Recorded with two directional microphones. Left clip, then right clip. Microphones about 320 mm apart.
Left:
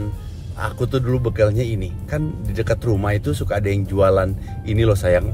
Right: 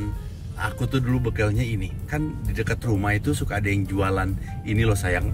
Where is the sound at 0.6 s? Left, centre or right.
Centre.